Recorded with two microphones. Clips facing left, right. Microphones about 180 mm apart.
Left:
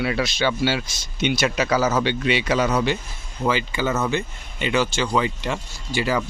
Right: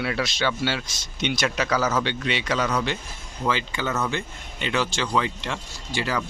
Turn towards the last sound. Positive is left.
turn(degrees=5)  # may be behind; listen again after turning